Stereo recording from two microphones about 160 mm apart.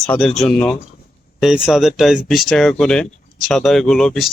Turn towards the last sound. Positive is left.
turn(degrees=0)  # may be behind; listen again after turning